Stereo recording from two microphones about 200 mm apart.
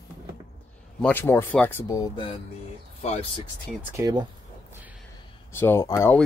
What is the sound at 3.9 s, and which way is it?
Speech, 20° right (ahead or behind).